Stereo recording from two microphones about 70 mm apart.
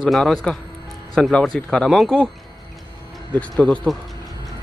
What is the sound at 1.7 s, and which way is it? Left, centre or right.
Speech, centre.